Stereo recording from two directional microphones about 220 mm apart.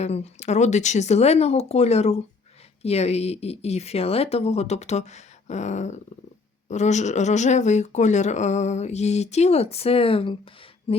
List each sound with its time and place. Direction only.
0.0 s speech: 30° left (ahead or behind)